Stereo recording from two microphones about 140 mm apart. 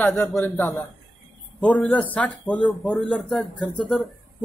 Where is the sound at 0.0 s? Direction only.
15° left (ahead or behind).